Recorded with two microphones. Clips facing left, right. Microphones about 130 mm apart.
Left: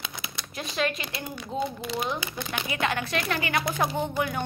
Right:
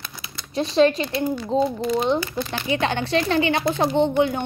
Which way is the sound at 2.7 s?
30° right (ahead or behind).